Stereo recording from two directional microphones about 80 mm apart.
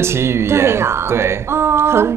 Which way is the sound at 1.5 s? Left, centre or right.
Right.